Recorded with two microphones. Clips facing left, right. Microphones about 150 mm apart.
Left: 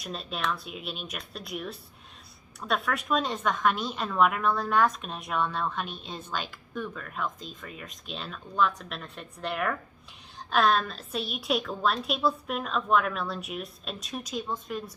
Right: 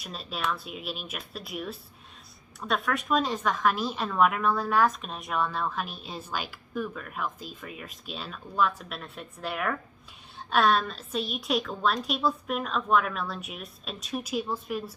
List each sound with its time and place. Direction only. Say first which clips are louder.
0.0 s a woman's voice: even; centre (ahead or behind)